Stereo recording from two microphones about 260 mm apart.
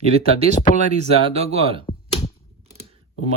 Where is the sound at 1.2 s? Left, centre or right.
Right.